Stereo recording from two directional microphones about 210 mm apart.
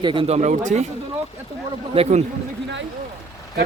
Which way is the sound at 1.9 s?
30° right (ahead or behind).